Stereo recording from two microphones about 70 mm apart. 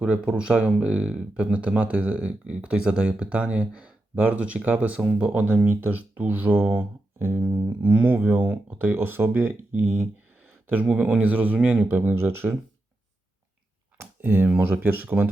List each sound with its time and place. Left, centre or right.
0.0 s speech: centre
14.0 s a sound: right
14.6 s speech: right